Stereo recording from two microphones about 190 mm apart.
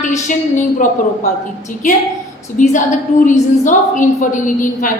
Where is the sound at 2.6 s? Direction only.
40° left (ahead or behind).